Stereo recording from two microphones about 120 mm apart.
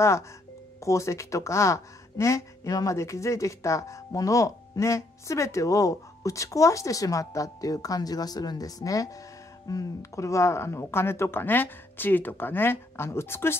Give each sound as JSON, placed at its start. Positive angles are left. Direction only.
{"t": 0.7, "sound": "speech", "side_deg": 25}